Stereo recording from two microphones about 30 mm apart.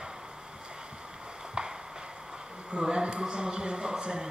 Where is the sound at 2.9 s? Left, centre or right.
Right.